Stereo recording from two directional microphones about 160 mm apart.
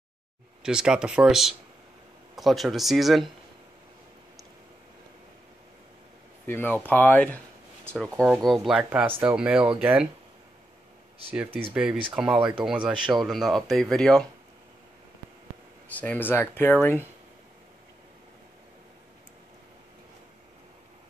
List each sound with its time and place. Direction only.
0.6 s speech: 5° right (ahead or behind)
6.4 s speech: 15° left (ahead or behind)
8.2 s speech: 20° right (ahead or behind)
8.5 s speech: 5° right (ahead or behind)
11.2 s speech: 10° right (ahead or behind)
15.9 s speech: 10° left (ahead or behind)